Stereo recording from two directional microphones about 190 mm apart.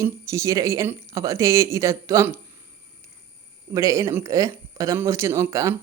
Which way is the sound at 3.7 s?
15° right (ahead or behind).